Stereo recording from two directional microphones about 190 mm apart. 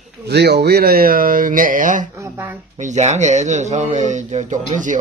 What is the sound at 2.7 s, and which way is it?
Speech, 40° right (ahead or behind).